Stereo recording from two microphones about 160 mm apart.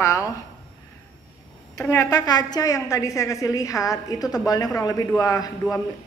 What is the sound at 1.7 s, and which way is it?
A woman's voice, 20° left (ahead or behind).